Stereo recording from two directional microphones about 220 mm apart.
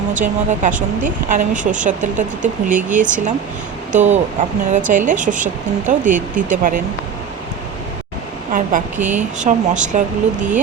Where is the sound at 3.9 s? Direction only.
35° right (ahead or behind).